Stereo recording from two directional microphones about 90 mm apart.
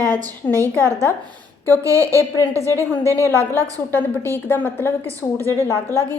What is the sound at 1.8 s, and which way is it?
A woman's voice, 35° right (ahead or behind).